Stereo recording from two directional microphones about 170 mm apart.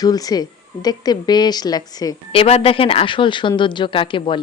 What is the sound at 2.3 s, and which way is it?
A woman's voice, 35° left (ahead or behind).